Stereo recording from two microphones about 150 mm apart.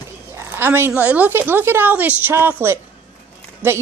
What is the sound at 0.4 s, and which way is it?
Speech, 15° right (ahead or behind).